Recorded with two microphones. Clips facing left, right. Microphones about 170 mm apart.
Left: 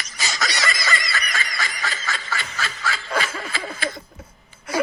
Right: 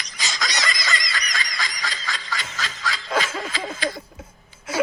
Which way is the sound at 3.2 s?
10° left (ahead or behind).